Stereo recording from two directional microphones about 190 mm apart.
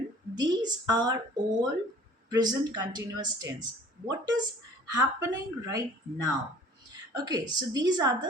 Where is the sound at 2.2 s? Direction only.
20° right (ahead or behind).